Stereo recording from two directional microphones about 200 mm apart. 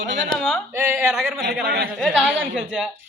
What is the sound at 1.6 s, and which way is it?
Speech, 50° right (ahead or behind).